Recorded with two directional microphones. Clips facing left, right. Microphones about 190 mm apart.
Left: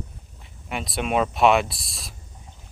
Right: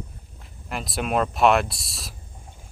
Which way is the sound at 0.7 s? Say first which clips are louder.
Left 1 dB; centre (ahead or behind).